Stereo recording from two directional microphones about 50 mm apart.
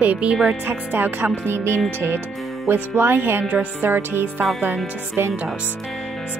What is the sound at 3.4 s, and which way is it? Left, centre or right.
Speech, right.